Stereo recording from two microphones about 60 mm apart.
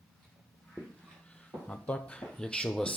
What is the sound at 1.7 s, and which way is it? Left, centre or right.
Speech, centre.